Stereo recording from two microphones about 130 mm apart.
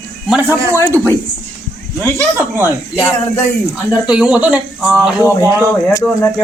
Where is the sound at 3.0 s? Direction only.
20° left (ahead or behind).